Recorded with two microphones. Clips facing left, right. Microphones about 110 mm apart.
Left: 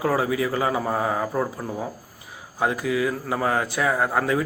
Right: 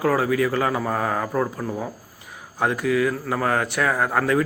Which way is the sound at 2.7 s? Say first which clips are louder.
Right 3 dB; 30° left (ahead or behind).